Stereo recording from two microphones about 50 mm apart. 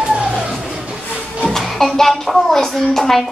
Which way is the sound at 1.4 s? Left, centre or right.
Centre.